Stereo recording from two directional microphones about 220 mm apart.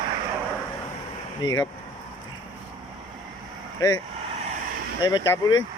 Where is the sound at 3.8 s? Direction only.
15° left (ahead or behind).